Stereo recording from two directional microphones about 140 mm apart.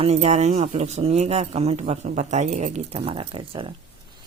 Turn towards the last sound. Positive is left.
turn(degrees=-40)  # may be behind; listen again after turning